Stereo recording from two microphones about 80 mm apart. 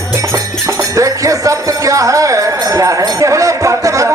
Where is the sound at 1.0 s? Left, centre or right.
Right.